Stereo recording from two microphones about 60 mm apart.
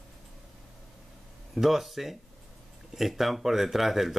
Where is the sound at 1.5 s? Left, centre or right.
Centre.